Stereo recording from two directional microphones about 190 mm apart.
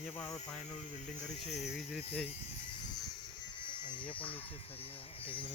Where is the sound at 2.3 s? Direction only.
35° left (ahead or behind).